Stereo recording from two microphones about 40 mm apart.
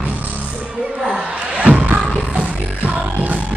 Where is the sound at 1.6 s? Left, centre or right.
Right.